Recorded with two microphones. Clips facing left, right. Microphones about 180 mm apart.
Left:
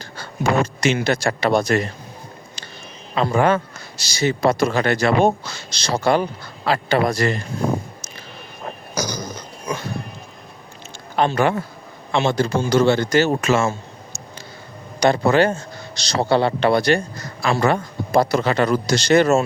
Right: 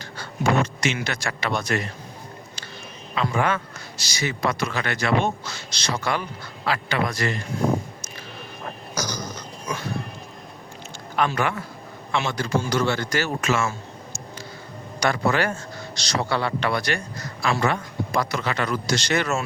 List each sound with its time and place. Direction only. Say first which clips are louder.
0.0 s speech: left 2 dB; 35° left (ahead or behind)
3.2 s speech: left 6 dB; 35° left (ahead or behind)
9.0 s a sound: left 4 dB; 10° left (ahead or behind)
11.2 s a man's voice: left 5 dB; 30° left (ahead or behind)
15.0 s a man's voice: left 7 dB; 25° left (ahead or behind)